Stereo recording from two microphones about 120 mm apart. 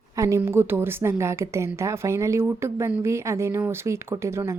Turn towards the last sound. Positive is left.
turn(degrees=-25)  # may be behind; listen again after turning